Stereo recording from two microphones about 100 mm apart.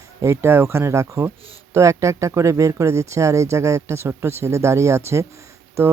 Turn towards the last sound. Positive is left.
turn(degrees=-25)  # may be behind; listen again after turning